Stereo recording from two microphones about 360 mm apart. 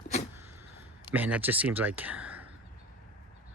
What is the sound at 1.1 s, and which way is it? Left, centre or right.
Speech, centre.